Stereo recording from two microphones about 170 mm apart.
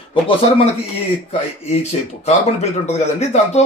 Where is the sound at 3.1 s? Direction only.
40° left (ahead or behind).